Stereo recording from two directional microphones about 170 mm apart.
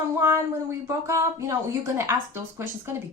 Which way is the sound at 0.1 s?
15° right (ahead or behind).